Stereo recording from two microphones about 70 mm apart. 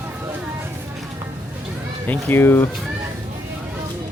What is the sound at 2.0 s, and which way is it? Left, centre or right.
Speech, left.